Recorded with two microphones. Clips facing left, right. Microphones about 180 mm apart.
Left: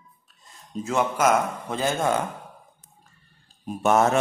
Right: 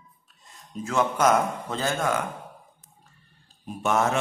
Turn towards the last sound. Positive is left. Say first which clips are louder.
# left 4 dB
turn(degrees=40)  # may be behind; listen again after turning